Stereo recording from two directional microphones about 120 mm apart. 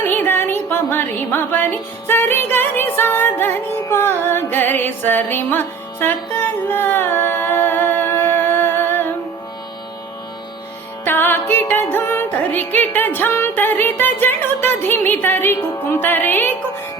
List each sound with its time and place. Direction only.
0.1 s music: 15° left (ahead or behind)
11.0 s music: 15° left (ahead or behind)